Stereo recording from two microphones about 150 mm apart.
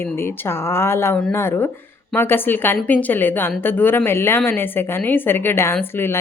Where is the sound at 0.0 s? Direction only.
15° left (ahead or behind).